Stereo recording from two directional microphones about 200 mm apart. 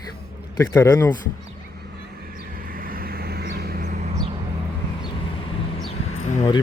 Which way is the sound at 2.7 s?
45° right (ahead or behind).